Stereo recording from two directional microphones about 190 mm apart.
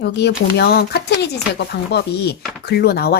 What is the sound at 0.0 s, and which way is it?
Speech, 65° left (ahead or behind).